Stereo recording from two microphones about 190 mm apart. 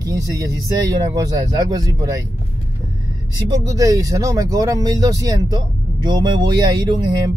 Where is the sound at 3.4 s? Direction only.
20° right (ahead or behind).